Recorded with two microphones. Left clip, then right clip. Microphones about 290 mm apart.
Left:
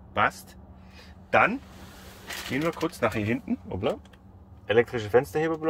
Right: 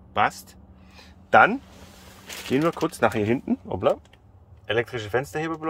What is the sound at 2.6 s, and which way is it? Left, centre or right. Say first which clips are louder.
Speech: right 4 dB; right.